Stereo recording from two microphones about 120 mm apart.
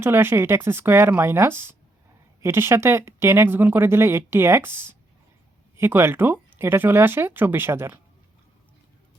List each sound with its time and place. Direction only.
0.0 s speech: 20° right (ahead or behind)